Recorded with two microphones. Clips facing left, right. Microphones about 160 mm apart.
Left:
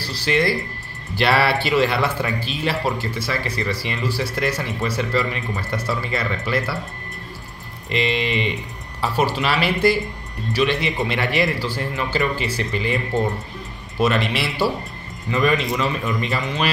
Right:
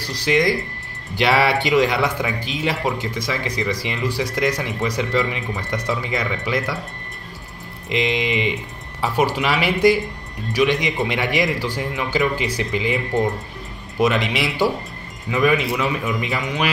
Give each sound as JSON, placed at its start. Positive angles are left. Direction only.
{"t": 0.0, "sound": "speech", "side_deg": -15}
{"t": 7.9, "sound": "speech", "side_deg": -15}